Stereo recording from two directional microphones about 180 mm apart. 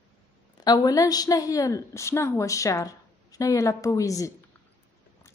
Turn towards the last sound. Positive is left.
turn(degrees=20)  # may be behind; listen again after turning